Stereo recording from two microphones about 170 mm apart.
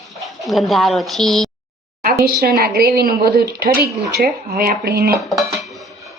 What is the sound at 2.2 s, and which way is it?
A woman's voice, 65° right (ahead or behind).